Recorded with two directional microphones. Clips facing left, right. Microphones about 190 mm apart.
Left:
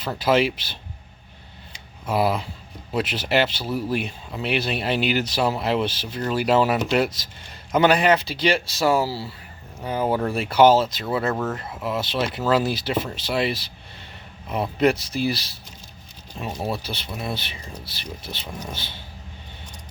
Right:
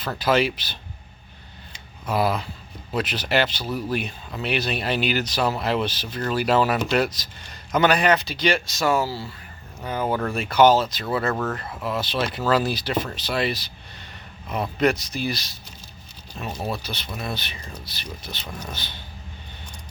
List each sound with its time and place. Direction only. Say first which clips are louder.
0.2 s speech: left 1 dB; 25° left (ahead or behind)
2.0 s speech: left 1 dB; 25° left (ahead or behind)
11.3 s speech: even; 10° left (ahead or behind)
11.9 s speech: left 1 dB; 25° left (ahead or behind)
16.3 s speech: left 1 dB; 20° left (ahead or behind)